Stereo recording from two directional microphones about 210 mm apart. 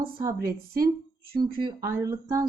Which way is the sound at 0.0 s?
20° right (ahead or behind).